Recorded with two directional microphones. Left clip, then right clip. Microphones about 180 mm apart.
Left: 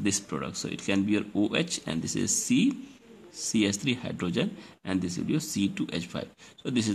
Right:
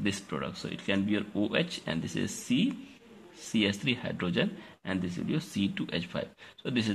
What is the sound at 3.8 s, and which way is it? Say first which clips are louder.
Speech: left 1 dB; 25° left (ahead or behind).